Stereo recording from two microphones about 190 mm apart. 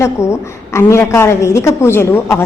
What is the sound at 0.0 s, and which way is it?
A woman's voice, 15° left (ahead or behind).